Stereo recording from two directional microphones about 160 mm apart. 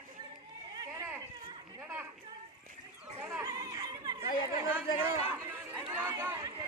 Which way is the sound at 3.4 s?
20° right (ahead or behind).